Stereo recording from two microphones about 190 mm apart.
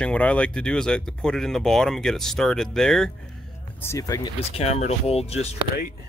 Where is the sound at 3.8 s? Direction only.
15° left (ahead or behind).